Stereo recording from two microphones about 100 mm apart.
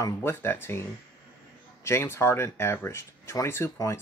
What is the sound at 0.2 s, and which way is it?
Speech, 25° left (ahead or behind).